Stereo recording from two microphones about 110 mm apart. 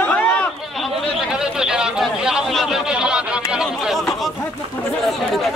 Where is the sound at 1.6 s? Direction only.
5° right (ahead or behind).